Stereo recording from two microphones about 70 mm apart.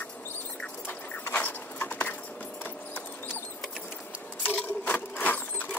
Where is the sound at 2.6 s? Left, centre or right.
Left.